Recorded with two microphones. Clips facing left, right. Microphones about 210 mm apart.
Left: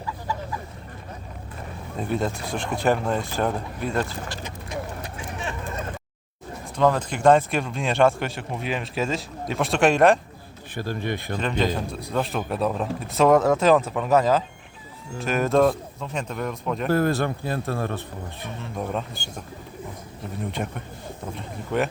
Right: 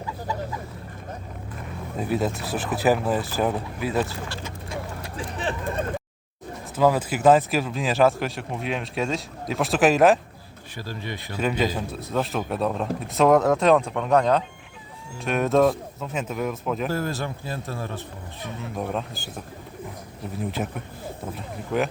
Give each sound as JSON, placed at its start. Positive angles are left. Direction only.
{"t": 2.0, "sound": "speech", "side_deg": -5}
{"t": 4.3, "sound": "vehicle", "side_deg": 20}
{"t": 5.1, "sound": "a sound", "side_deg": -35}
{"t": 6.7, "sound": "speech", "side_deg": -5}
{"t": 10.8, "sound": "speech", "side_deg": 55}
{"t": 11.3, "sound": "speech", "side_deg": -5}
{"t": 16.9, "sound": "speech", "side_deg": 60}
{"t": 18.8, "sound": "speech", "side_deg": 0}
{"t": 20.3, "sound": "speech", "side_deg": 0}